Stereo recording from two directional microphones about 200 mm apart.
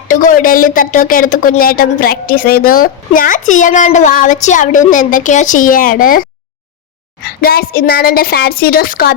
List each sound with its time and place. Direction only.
0.1 s speech: 40° left (ahead or behind)
7.3 s a woman's voice: 50° left (ahead or behind)